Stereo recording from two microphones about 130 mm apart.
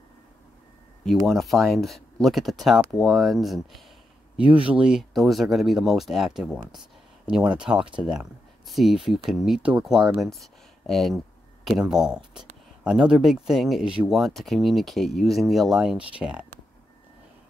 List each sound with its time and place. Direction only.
1.0 s speech: centre (ahead or behind)